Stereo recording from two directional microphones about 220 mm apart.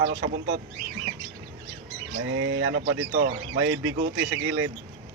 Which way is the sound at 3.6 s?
65° right (ahead or behind).